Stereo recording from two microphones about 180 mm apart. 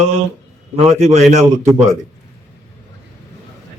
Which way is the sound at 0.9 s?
40° right (ahead or behind).